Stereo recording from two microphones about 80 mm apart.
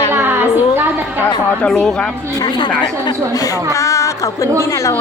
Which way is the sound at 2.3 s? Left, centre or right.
Left.